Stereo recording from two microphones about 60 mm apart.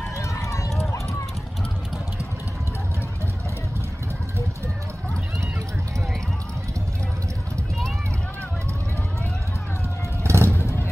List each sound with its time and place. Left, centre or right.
0.2 s run: left
10.2 s vehicle: right
10.6 s vehicle: left